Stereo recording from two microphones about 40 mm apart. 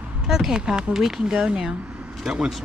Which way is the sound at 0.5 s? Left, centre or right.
Right.